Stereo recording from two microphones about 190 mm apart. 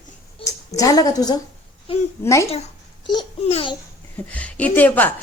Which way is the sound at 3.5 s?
30° left (ahead or behind).